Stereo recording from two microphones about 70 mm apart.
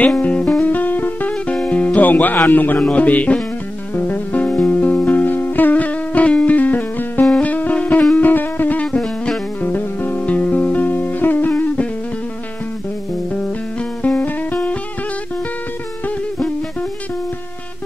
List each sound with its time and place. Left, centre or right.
0.0 s music: centre
0.7 s music: left
1.3 s music: centre
8.8 s music: centre
9.6 s music: left
13.3 s music: left